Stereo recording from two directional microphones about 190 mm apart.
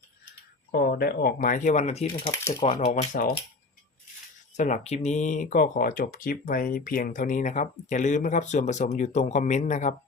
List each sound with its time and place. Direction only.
0.7 s speech: 55° left (ahead or behind); by 2.8 s 35° left (ahead or behind)
3.0 s speech: 45° left (ahead or behind)
4.5 s speech: 40° left (ahead or behind)